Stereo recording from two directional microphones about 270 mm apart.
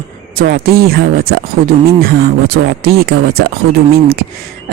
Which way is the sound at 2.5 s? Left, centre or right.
Right.